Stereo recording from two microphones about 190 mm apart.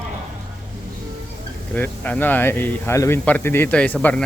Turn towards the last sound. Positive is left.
turn(degrees=5)  # may be behind; listen again after turning